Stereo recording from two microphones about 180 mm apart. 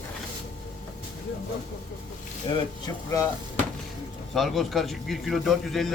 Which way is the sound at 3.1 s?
15° left (ahead or behind).